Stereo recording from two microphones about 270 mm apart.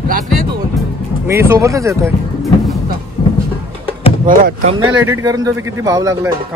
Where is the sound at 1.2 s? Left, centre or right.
Centre.